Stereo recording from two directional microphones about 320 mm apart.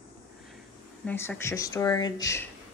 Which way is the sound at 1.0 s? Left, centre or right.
Centre.